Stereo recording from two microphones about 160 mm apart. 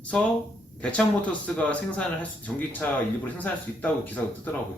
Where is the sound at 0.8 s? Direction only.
10° left (ahead or behind).